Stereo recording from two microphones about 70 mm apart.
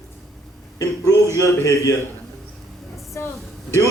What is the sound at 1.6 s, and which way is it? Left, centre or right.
Speech, left.